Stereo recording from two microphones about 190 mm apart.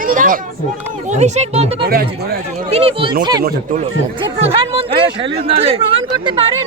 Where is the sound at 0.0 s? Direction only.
45° right (ahead or behind).